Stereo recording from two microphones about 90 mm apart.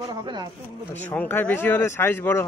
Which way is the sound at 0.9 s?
20° left (ahead or behind).